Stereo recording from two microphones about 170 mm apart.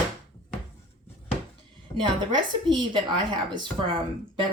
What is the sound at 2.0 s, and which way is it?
Speech, 25° right (ahead or behind).